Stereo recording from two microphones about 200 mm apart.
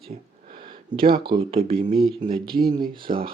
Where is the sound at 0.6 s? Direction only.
25° right (ahead or behind).